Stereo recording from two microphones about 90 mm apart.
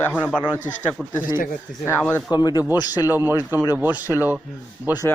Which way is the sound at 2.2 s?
50° left (ahead or behind).